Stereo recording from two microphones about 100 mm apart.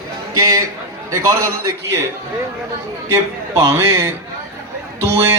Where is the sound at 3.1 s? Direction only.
30° right (ahead or behind).